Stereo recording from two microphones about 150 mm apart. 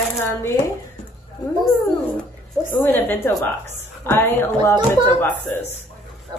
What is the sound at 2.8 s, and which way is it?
Speech, 15° left (ahead or behind).